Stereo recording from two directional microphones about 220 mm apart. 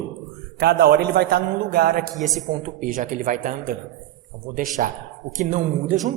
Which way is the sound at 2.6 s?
35° right (ahead or behind).